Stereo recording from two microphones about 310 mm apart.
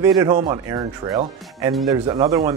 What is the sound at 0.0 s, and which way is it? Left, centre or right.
Speech, centre.